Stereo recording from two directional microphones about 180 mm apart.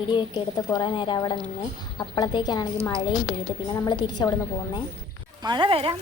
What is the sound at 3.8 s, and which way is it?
Speech, 25° left (ahead or behind).